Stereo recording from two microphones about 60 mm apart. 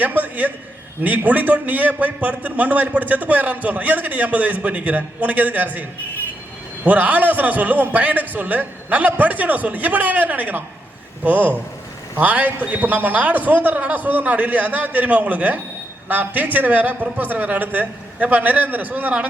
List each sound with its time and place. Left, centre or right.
0.0 s a man's voice: right
6.8 s a man's voice: right